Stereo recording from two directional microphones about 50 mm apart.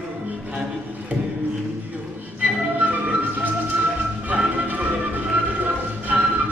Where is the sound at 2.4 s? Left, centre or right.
Right.